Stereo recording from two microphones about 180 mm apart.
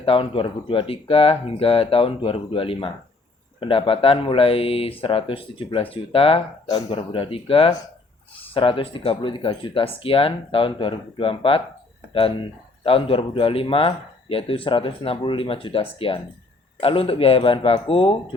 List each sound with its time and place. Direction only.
0.0 s speech: 30° left (ahead or behind)
12.8 s speech: 30° left (ahead or behind)